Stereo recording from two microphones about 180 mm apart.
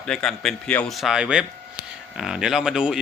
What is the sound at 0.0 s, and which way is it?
Speech, 5° left (ahead or behind).